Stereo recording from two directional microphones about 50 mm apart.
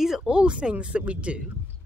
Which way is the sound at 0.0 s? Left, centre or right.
Centre.